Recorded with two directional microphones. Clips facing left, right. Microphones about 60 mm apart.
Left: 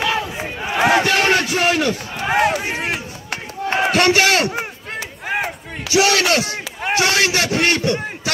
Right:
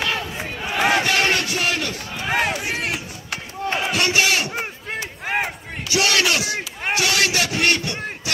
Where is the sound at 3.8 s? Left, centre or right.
Left.